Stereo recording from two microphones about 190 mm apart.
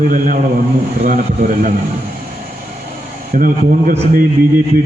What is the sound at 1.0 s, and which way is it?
Speech, 40° right (ahead or behind).